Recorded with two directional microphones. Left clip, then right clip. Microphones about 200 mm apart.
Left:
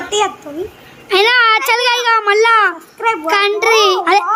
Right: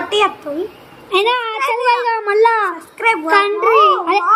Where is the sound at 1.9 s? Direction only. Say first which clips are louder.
Left 3 dB; 40° left (ahead or behind).